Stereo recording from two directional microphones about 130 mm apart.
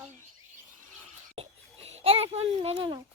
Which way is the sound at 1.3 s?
50° right (ahead or behind).